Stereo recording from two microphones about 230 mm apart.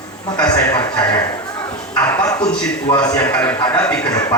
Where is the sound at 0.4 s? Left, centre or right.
Centre.